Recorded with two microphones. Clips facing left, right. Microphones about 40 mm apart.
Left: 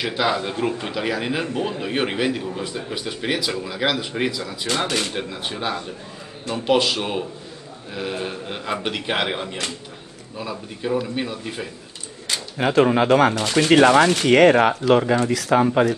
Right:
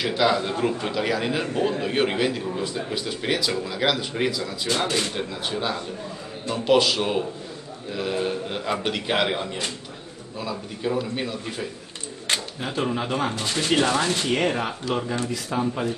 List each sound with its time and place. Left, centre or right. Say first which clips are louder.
0.0 s a man's voice: even; centre
10.8 s a man's voice: left 3 dB; centre
12.5 s speech: left 9 dB; left